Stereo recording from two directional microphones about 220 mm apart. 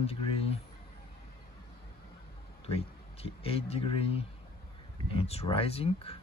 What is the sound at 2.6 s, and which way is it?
Speech, 25° left (ahead or behind).